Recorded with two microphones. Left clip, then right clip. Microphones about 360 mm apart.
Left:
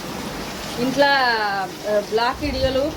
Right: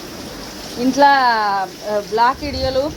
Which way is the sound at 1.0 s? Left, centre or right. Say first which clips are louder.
Right 5 dB; centre.